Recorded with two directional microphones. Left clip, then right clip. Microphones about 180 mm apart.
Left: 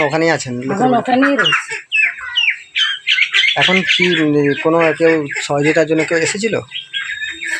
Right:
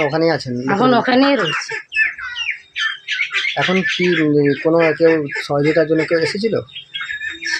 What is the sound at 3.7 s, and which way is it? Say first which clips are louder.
Speech: left 4 dB; 15° left (ahead or behind).